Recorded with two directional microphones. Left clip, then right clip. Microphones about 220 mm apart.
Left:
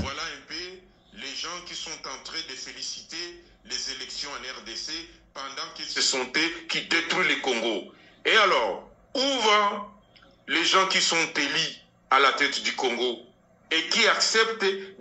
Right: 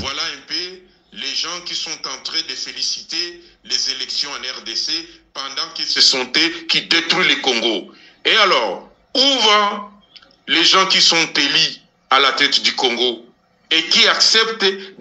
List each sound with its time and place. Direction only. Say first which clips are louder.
0.0 s a man's voice: right 9 dB; 45° right (ahead or behind)